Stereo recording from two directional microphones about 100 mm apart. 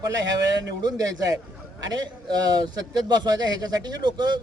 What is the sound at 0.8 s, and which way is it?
A man's voice, 40° right (ahead or behind).